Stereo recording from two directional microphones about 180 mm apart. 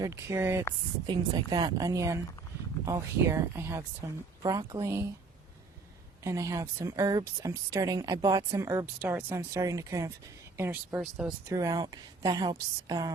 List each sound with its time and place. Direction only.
0.0 s speech: 15° right (ahead or behind)
1.0 s a woman's voice: 25° right (ahead or behind)
6.2 s speech: 15° right (ahead or behind)
11.4 s a woman's voice: 20° right (ahead or behind)